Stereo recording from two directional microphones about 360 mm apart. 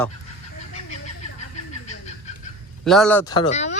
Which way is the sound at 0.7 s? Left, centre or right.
Centre.